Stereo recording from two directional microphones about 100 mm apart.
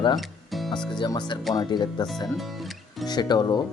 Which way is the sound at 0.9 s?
45° left (ahead or behind).